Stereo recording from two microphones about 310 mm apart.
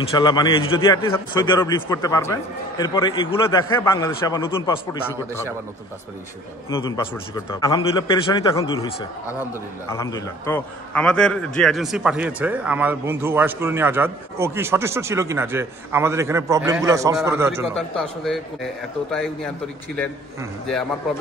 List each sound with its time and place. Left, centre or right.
0.2 s a man's voice: centre
6.7 s a man's voice: centre